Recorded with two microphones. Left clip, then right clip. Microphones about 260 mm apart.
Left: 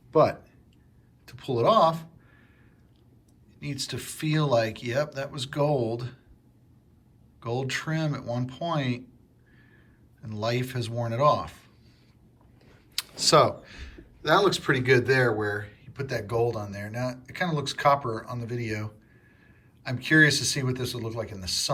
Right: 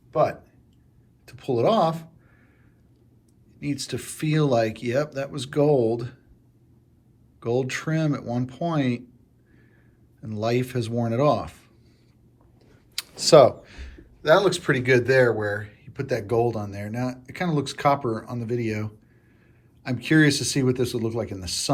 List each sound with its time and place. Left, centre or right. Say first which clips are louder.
0.1 s speech: left 1 dB; centre
1.2 s speech: right 2 dB; centre
3.6 s speech: right 4 dB; centre
7.3 s speech: right 5 dB; centre
10.4 s speech: right 4 dB; centre
13.0 s speech: right 6 dB; centre